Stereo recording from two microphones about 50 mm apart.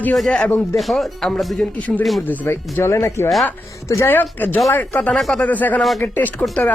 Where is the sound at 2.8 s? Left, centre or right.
Left.